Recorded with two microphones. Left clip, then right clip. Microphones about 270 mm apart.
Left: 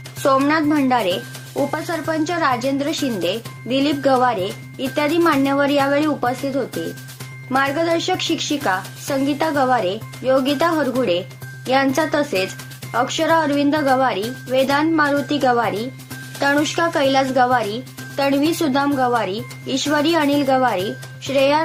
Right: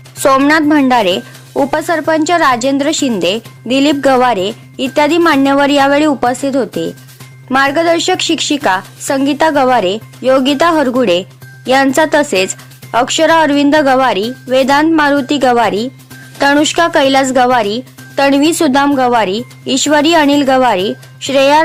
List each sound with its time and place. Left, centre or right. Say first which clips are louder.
0.2 s speech: right 7 dB; right